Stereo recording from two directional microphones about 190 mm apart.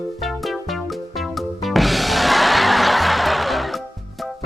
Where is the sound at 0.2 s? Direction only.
Centre (ahead or behind).